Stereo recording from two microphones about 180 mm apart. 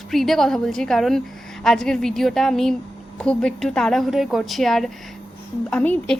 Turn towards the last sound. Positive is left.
turn(degrees=5)  # may be behind; listen again after turning